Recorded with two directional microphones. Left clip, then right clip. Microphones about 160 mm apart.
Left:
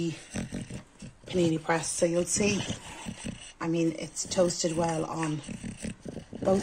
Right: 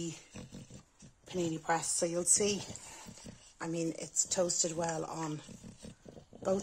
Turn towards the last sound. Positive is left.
turn(degrees=20)  # may be behind; listen again after turning